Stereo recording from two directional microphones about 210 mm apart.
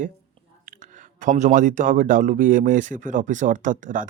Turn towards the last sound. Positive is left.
turn(degrees=-40)  # may be behind; listen again after turning